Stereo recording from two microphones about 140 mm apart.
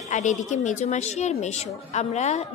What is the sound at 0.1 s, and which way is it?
A woman's voice, 60° left (ahead or behind).